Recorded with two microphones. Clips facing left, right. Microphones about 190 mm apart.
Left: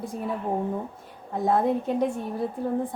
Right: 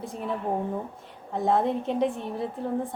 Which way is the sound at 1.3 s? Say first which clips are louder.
Left 1 dB; centre (ahead or behind).